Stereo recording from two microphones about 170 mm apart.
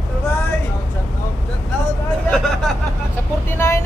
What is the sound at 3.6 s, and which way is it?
Vehicle, 15° left (ahead or behind).